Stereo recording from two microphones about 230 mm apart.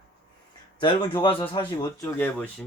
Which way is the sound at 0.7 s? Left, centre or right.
Centre.